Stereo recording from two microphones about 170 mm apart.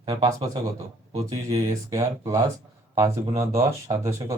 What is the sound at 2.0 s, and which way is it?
Speech, 20° right (ahead or behind).